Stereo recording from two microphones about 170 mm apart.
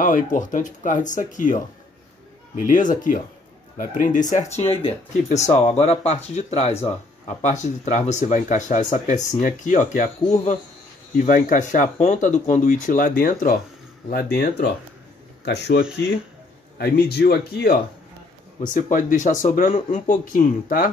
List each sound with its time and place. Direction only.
0.0 s speech: 50° left (ahead or behind)
11.1 s speech: 50° left (ahead or behind)
14.0 s speech: 65° left (ahead or behind)
15.4 s speech: 85° left
16.7 s speech: 70° left (ahead or behind)
18.6 s speech: 50° left (ahead or behind)